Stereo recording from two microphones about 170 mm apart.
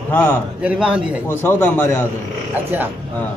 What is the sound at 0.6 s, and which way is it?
Speech, 5° right (ahead or behind).